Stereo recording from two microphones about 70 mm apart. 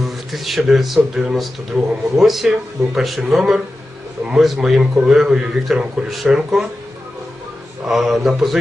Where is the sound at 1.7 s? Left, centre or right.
Centre.